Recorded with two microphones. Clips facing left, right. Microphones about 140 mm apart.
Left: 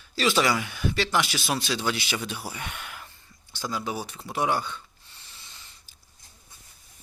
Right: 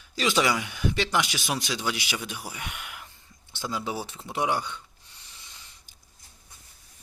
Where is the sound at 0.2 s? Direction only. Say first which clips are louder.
Left 1 dB; 15° right (ahead or behind).